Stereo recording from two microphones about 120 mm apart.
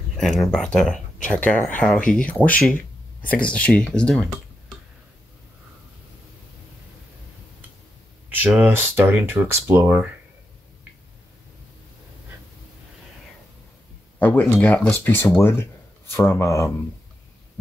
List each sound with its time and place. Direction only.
0.2 s speech: centre (ahead or behind)
8.5 s speech: 15° right (ahead or behind)
14.2 s speech: 15° left (ahead or behind)